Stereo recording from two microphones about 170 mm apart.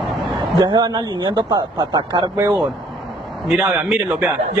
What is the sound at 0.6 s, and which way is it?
A man's voice, 25° right (ahead or behind).